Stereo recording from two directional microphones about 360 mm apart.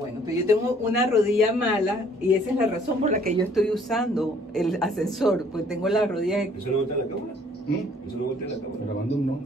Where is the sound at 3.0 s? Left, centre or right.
Right.